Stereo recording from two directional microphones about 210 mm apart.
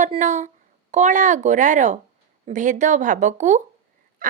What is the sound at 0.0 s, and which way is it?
A woman's voice, 35° right (ahead or behind).